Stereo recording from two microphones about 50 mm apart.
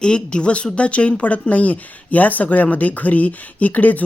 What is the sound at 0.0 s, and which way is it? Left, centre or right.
Speech, centre.